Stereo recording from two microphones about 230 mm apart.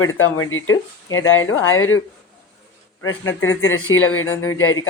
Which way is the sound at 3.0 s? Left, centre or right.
Left.